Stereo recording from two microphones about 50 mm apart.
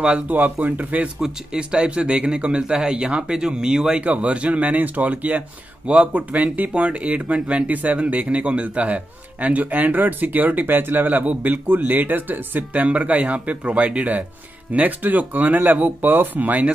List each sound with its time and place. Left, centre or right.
0.3 s a man's voice: right
1.2 s speech: centre
4.0 s a man's voice: right